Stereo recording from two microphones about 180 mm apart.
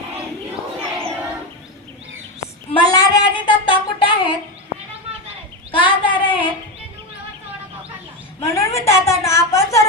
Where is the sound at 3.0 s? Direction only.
25° left (ahead or behind).